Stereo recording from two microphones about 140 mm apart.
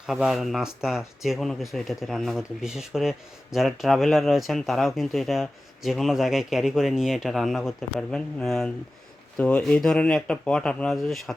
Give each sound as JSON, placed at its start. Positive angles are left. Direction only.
{"t": 0.0, "sound": "speech", "side_deg": -5}